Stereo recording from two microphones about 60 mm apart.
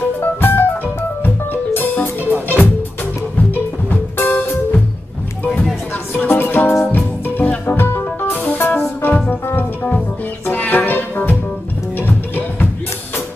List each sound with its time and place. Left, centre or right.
0.0 s music: left
3.3 s music: left
6.1 s music: left
7.0 s music: left
9.0 s music: left
10.5 s music: left